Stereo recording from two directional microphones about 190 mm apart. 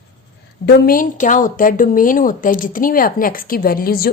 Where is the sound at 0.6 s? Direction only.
50° left (ahead or behind).